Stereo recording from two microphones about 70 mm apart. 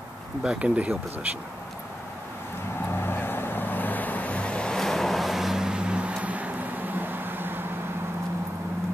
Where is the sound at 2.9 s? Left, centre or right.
Left; by 7.6 s right.